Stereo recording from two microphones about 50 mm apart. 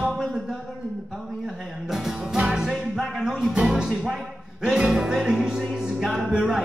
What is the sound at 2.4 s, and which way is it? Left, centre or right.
Music, centre.